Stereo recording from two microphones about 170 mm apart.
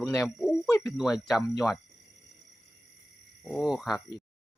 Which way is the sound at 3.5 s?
Centre (ahead or behind).